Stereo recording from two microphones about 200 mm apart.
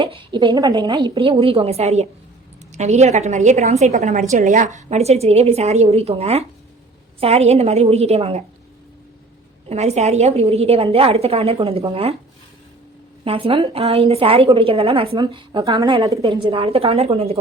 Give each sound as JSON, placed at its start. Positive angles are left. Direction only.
{"t": 0.0, "sound": "a woman's voice", "side_deg": -25}
{"t": 9.6, "sound": "a woman's voice", "side_deg": -35}
{"t": 13.2, "sound": "a woman's voice", "side_deg": -25}